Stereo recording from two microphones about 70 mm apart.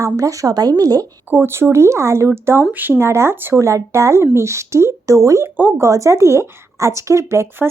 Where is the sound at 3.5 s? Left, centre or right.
Right.